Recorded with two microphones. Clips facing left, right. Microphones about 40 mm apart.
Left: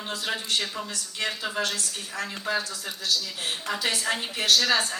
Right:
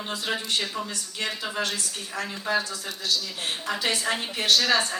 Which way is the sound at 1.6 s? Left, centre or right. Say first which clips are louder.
Even; centre.